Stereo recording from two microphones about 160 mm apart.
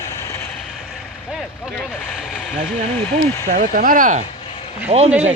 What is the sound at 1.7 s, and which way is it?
Speech, 5° left (ahead or behind).